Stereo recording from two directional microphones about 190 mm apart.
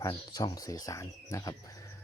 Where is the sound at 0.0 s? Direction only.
20° left (ahead or behind).